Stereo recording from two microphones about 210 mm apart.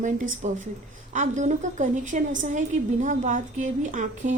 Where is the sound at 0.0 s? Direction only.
35° right (ahead or behind).